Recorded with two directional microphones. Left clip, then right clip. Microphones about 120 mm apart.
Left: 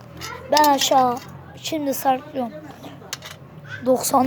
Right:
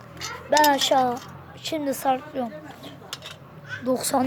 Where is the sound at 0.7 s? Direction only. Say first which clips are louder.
Left 3 dB; 10° right (ahead or behind).